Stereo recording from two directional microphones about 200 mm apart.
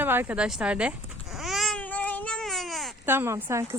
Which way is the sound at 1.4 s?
Centre (ahead or behind).